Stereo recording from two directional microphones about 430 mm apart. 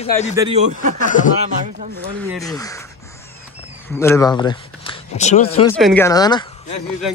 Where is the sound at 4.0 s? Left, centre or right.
Centre.